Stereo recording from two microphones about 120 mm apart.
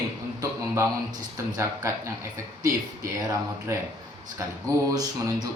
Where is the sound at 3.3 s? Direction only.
25° right (ahead or behind).